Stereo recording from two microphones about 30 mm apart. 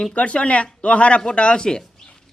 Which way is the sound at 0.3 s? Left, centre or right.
Left.